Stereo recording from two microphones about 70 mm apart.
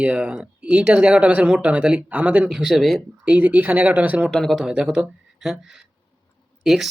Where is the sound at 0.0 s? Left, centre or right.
Centre.